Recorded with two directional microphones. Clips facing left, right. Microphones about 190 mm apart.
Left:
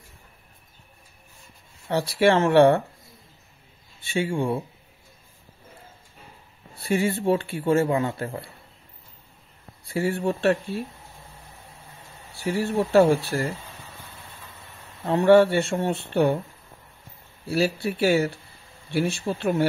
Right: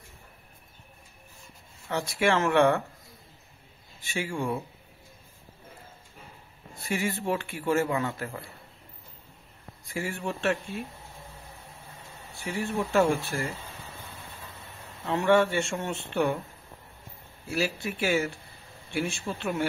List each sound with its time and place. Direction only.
1.9 s speech: 35° left (ahead or behind)
4.0 s speech: 30° left (ahead or behind)
6.7 s speech: 30° left (ahead or behind)
9.8 s speech: 35° left (ahead or behind)
12.4 s speech: 35° left (ahead or behind)
15.0 s speech: 35° left (ahead or behind)
17.5 s speech: 35° left (ahead or behind)